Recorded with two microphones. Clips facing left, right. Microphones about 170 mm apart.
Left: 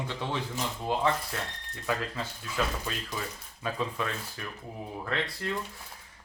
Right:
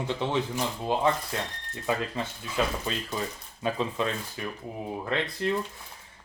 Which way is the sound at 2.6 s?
20° right (ahead or behind).